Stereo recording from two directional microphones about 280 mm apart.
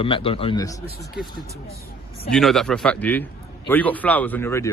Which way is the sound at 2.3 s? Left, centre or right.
Centre.